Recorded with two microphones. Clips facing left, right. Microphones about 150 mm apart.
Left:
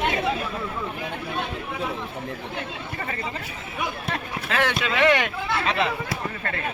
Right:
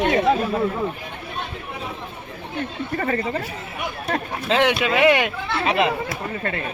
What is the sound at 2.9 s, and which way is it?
Speech, 45° right (ahead or behind).